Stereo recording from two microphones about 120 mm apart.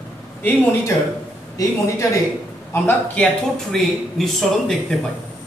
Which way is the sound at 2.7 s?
15° left (ahead or behind).